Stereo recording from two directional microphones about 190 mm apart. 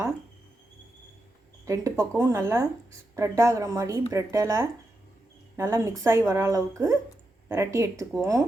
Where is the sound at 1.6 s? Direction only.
15° right (ahead or behind).